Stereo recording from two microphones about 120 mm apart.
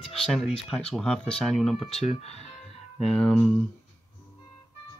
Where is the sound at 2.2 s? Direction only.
60° left (ahead or behind).